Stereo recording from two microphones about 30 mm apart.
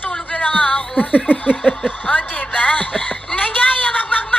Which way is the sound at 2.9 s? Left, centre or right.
Left.